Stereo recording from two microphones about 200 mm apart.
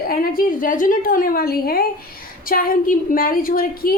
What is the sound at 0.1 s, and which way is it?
A woman's voice, 45° left (ahead or behind).